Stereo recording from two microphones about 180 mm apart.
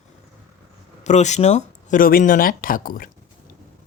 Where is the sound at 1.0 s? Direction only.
40° left (ahead or behind).